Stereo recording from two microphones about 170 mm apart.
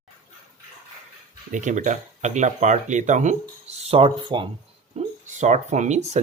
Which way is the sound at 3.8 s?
35° right (ahead or behind).